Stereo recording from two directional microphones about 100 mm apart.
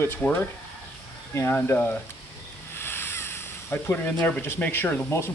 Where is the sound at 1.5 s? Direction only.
20° left (ahead or behind).